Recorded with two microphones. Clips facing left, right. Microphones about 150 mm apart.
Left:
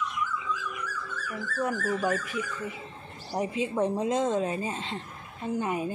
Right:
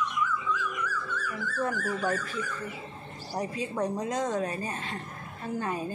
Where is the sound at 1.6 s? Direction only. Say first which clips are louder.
Left 2 dB; 15° left (ahead or behind).